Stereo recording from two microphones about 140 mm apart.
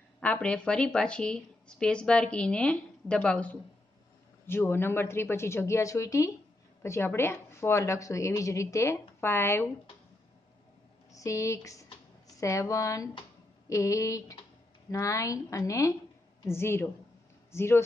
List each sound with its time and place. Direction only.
0.2 s a woman's voice: 10° left (ahead or behind)
11.1 s a woman's voice: 25° left (ahead or behind)